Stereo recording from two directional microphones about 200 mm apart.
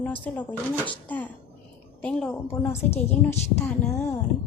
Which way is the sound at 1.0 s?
10° left (ahead or behind).